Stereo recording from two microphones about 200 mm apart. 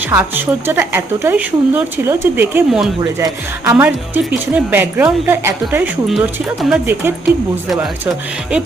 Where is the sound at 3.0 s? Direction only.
15° right (ahead or behind).